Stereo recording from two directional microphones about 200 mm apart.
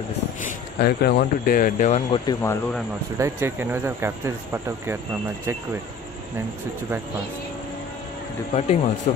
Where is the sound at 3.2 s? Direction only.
10° right (ahead or behind).